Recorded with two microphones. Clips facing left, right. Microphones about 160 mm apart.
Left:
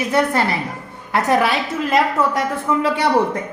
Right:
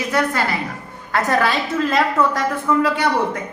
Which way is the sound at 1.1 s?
15° left (ahead or behind).